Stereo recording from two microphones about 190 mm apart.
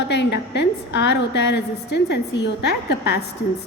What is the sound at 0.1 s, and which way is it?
A woman's voice, 65° left (ahead or behind).